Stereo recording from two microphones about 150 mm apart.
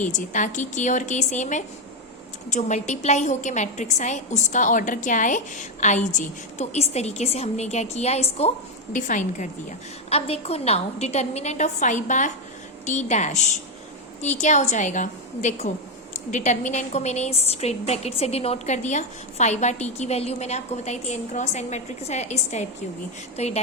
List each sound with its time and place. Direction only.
0.0 s a woman's voice: 55° left (ahead or behind)
10.1 s a woman's voice: 40° left (ahead or behind)